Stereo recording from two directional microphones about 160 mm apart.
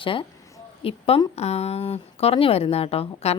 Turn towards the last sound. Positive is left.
turn(degrees=40)  # may be behind; listen again after turning